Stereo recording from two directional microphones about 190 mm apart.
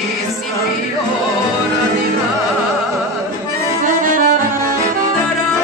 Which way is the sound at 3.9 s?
45° right (ahead or behind).